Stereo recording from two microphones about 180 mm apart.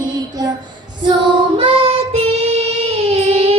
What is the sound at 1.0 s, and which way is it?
Child singing, 25° right (ahead or behind).